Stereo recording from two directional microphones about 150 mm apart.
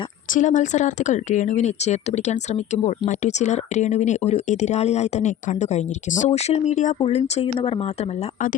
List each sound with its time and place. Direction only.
0.3 s speech: 55° left (ahead or behind); by 7.9 s 40° left (ahead or behind)